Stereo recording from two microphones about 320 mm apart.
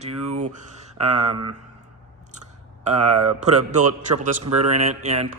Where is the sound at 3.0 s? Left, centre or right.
Right.